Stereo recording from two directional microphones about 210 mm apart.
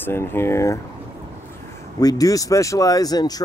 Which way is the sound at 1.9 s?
15° left (ahead or behind).